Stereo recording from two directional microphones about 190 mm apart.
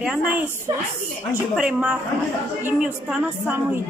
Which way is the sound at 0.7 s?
15° right (ahead or behind).